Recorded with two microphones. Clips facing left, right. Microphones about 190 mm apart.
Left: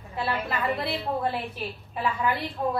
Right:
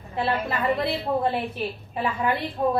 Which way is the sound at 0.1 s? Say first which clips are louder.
Right 3 dB; 25° right (ahead or behind).